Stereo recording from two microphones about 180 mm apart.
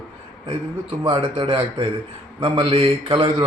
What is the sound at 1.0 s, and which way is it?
A man's voice, 30° right (ahead or behind).